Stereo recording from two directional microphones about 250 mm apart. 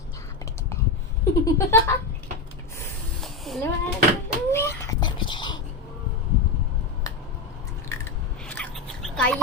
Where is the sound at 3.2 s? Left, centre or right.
Centre.